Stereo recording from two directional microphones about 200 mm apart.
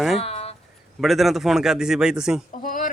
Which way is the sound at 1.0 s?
Centre (ahead or behind).